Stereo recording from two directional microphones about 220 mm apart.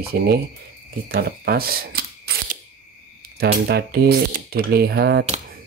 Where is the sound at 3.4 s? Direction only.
45° right (ahead or behind).